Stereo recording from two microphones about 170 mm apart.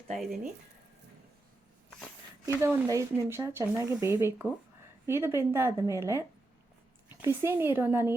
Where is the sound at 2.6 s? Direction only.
15° right (ahead or behind).